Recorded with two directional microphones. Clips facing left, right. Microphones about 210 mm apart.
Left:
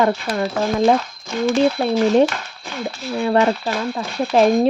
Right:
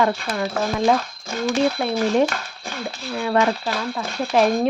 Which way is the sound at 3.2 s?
35° left (ahead or behind).